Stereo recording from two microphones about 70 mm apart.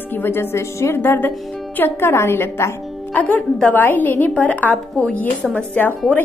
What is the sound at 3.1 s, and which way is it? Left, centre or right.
A woman's voice, left.